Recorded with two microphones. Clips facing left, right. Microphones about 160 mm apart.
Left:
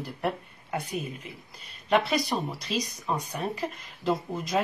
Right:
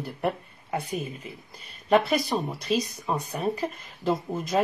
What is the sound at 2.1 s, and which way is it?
Speech, 55° right (ahead or behind).